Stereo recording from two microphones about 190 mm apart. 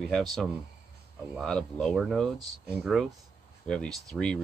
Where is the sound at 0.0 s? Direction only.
Centre (ahead or behind).